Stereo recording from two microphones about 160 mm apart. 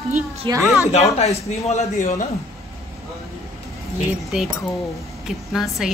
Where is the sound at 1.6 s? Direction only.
45° left (ahead or behind).